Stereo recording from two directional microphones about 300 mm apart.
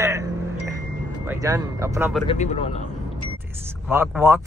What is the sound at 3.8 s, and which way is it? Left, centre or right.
Speech, centre.